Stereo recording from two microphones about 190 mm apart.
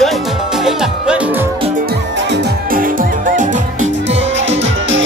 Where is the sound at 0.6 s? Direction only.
5° right (ahead or behind).